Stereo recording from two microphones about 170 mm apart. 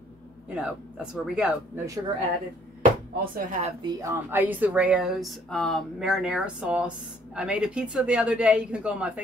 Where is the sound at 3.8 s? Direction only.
15° right (ahead or behind).